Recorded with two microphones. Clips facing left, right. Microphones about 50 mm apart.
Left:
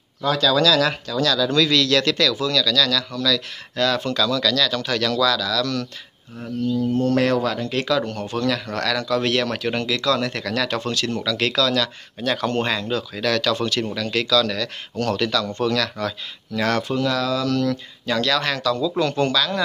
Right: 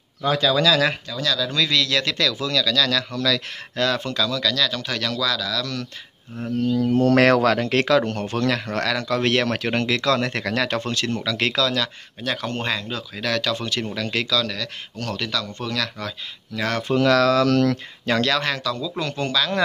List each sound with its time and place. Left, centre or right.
0.2 s speech: right
1.2 s speech: centre; by 3.4 s right
3.7 s speech: right
4.0 s speech: centre
6.7 s speech: right; by 14.5 s centre
14.5 s speech: centre
17.0 s speech: right
18.0 s speech: right
18.4 s speech: centre